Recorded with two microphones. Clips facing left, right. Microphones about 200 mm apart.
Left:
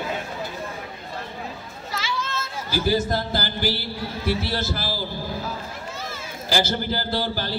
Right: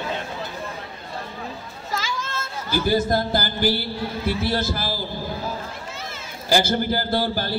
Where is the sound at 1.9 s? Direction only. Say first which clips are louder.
Right 1 dB; 45° right (ahead or behind).